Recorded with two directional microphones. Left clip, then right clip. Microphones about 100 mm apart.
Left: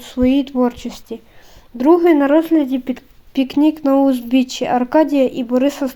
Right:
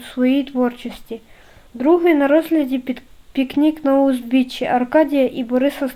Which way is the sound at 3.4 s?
30° left (ahead or behind).